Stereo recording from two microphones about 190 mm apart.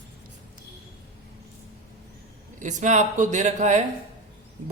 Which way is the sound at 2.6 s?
40° right (ahead or behind).